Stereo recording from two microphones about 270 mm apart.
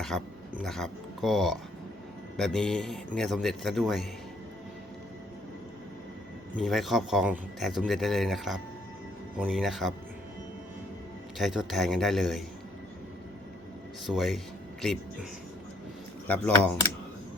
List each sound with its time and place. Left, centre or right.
0.0 s speech: centre
6.6 s speech: centre
11.3 s speech: centre
14.1 s speech: centre